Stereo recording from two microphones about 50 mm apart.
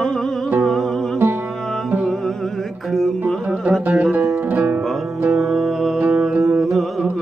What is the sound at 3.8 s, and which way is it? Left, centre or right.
Music, right.